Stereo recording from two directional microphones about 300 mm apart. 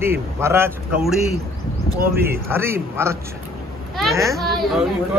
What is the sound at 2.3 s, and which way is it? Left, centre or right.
Speech, centre.